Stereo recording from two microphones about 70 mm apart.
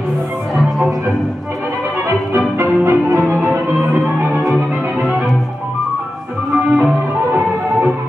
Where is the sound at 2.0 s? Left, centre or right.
Right.